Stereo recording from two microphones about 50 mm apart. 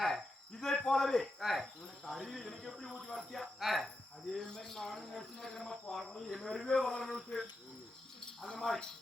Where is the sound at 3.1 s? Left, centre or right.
Centre.